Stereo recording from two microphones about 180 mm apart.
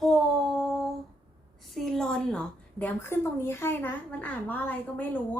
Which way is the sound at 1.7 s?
Centre (ahead or behind).